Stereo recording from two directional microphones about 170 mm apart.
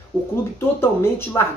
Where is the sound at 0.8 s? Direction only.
15° left (ahead or behind).